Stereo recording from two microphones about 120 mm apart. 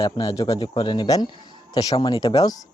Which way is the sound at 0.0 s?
30° left (ahead or behind).